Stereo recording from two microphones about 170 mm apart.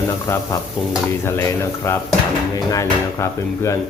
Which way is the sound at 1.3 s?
15° left (ahead or behind).